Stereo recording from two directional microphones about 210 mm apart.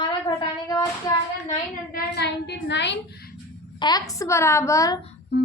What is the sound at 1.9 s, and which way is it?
A woman's voice, 55° left (ahead or behind).